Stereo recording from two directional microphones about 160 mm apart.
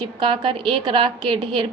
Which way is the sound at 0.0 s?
30° right (ahead or behind).